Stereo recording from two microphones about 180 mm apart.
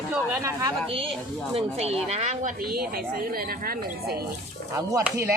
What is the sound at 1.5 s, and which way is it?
Speech, 35° right (ahead or behind).